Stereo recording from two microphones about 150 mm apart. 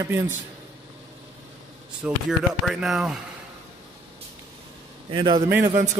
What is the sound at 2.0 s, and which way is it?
Speech, centre (ahead or behind).